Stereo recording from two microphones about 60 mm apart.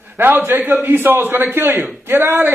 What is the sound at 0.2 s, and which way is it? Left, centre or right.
A man's voice, right.